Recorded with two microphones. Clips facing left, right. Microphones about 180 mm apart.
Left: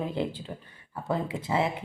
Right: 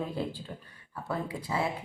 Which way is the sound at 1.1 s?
25° left (ahead or behind).